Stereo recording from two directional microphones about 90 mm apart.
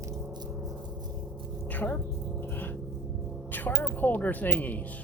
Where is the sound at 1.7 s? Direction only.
20° left (ahead or behind).